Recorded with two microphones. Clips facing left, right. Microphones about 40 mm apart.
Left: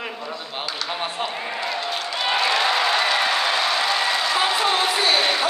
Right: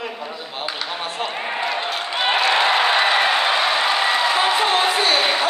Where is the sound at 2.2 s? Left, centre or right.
Right.